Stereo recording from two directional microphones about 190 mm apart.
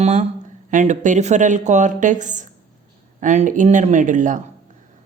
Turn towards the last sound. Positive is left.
turn(degrees=-40)  # may be behind; listen again after turning